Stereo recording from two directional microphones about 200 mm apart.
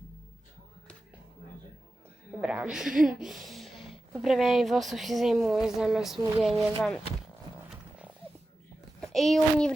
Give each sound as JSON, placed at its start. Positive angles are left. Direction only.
{"t": 2.4, "sound": "speech", "side_deg": -5}
{"t": 2.9, "sound": "speech", "side_deg": -45}
{"t": 3.2, "sound": "speech", "side_deg": 0}
{"t": 9.1, "sound": "speech", "side_deg": 0}